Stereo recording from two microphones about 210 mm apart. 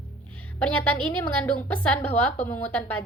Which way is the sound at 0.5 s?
5° left (ahead or behind).